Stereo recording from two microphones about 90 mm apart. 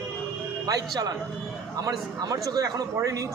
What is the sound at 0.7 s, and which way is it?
A man's voice, 40° right (ahead or behind).